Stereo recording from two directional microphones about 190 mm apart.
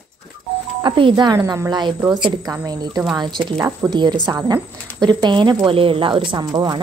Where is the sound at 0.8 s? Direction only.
25° right (ahead or behind).